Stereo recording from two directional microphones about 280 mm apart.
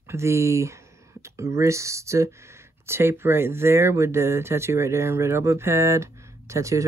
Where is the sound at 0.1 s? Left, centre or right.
Centre.